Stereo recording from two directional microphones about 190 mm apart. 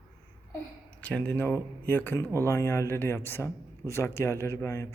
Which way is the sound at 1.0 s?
5° left (ahead or behind).